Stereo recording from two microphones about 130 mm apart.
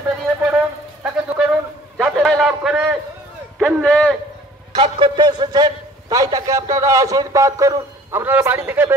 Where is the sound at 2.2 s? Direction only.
Centre (ahead or behind).